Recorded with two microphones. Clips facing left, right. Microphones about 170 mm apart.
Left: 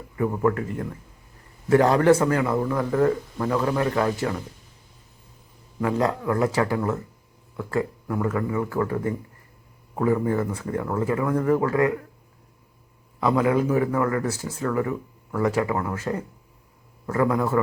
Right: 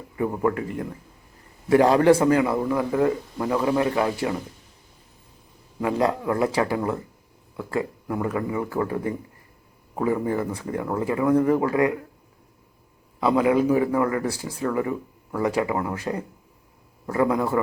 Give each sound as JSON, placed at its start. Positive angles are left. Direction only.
{"t": 0.2, "sound": "a man's voice", "side_deg": -20}
{"t": 5.8, "sound": "a man's voice", "side_deg": -15}
{"t": 13.1, "sound": "a man's voice", "side_deg": -20}